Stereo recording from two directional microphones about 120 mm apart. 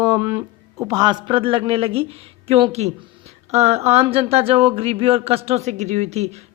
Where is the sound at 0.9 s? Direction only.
35° right (ahead or behind).